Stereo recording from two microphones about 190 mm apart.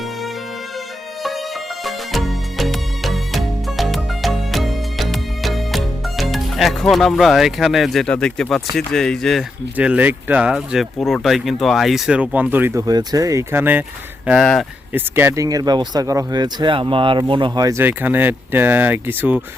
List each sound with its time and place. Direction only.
1.8 s music: centre (ahead or behind)
8.7 s speech: centre (ahead or behind)
14.3 s speech: centre (ahead or behind)
14.9 s speech: 10° right (ahead or behind)